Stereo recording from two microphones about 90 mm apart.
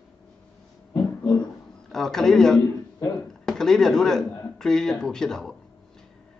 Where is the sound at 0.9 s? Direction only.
35° left (ahead or behind).